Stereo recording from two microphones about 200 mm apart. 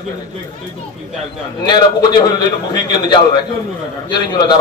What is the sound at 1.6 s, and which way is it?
A man's voice, 20° left (ahead or behind).